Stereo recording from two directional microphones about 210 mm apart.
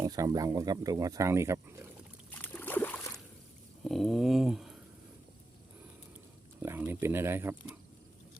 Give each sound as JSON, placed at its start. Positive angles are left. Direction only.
{"t": 0.0, "sound": "speech", "side_deg": -15}
{"t": 2.3, "sound": "a sound", "side_deg": 10}
{"t": 6.6, "sound": "speech", "side_deg": -10}